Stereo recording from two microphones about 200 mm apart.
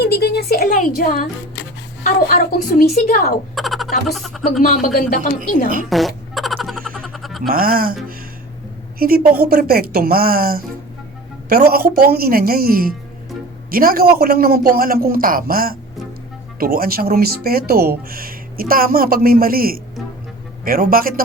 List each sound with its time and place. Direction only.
0.0 s a woman's voice: 50° left (ahead or behind)
3.5 s a sound: centre (ahead or behind)
4.1 s speech: centre (ahead or behind)
4.6 s a woman's voice: 45° left (ahead or behind)
5.9 s fart: centre (ahead or behind)
7.4 s speech: 45° right (ahead or behind)
9.0 s speech: 45° right (ahead or behind)